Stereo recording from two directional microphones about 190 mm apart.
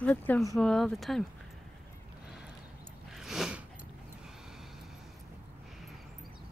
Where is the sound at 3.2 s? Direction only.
Centre (ahead or behind).